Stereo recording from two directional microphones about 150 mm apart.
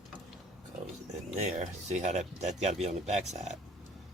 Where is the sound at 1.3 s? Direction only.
50° right (ahead or behind).